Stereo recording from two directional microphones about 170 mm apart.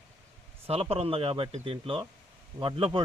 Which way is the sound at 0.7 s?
35° right (ahead or behind).